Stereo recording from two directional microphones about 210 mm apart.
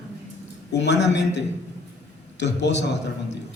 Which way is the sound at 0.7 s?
55° left (ahead or behind).